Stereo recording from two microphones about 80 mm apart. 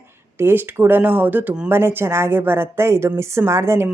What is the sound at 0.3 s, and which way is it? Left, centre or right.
A woman's voice, right.